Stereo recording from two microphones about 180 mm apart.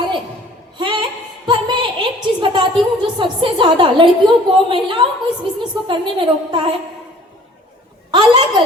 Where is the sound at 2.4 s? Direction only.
25° right (ahead or behind).